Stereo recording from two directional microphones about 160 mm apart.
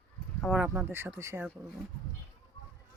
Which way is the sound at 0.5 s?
10° right (ahead or behind).